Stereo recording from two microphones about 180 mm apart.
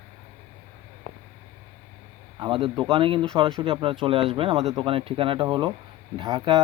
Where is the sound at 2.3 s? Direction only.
30° right (ahead or behind).